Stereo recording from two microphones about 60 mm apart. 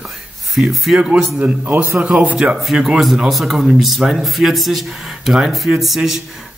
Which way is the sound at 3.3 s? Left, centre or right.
Centre.